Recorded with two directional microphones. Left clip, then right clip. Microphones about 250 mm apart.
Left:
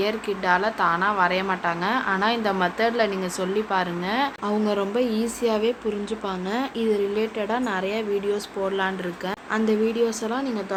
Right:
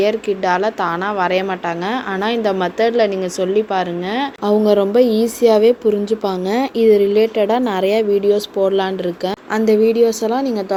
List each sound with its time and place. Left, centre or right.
0.0 s a woman's voice: centre